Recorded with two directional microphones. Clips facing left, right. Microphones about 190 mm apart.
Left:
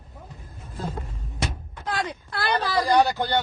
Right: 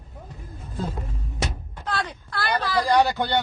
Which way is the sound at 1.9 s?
10° left (ahead or behind).